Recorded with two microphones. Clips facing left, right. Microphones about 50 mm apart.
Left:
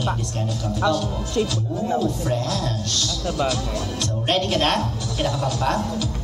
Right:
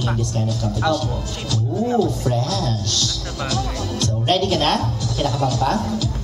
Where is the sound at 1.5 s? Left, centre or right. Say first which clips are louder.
Right 3 dB; left.